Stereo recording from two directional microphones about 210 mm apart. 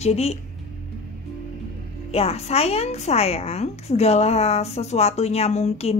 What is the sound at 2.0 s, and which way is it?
A woman's voice, 30° left (ahead or behind).